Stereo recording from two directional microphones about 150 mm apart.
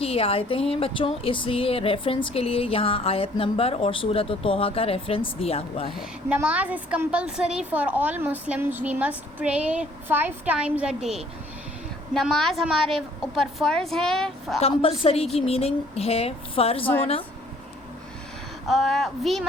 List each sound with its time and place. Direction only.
0.0 s speech: 40° left (ahead or behind)
6.0 s a woman's voice: 10° right (ahead or behind)
14.6 s speech: 40° left (ahead or behind)
18.7 s a woman's voice: centre (ahead or behind)